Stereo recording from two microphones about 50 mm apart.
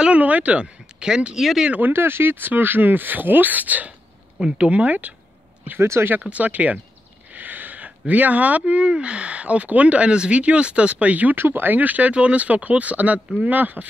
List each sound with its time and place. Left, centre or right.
0.0 s speech: right
1.9 s speech: right
5.8 s speech: right
6.3 s speech: right
11.3 s speech: right